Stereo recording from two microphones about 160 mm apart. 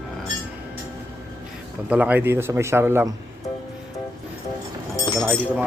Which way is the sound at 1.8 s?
10° right (ahead or behind).